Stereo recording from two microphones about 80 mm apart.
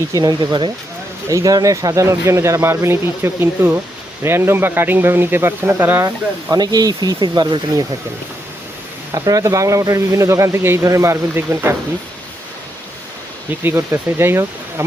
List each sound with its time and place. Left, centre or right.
0.1 s speech: right
1.3 s speech: right
6.0 s speech: right
6.6 s speech: right
9.1 s speech: right
13.7 s speech: right